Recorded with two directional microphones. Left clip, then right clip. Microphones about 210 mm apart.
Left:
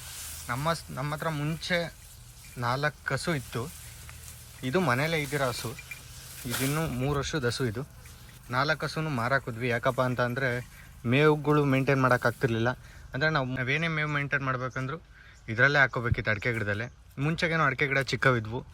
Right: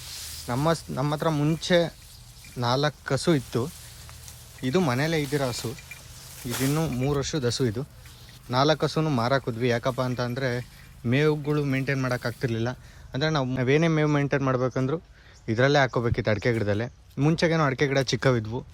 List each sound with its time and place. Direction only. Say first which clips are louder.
0.4 s speech: right 4 dB; 20° right (ahead or behind)
8.4 s speech: right 5 dB; 20° right (ahead or behind)